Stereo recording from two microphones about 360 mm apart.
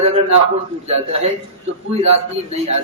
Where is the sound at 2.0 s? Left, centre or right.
Centre.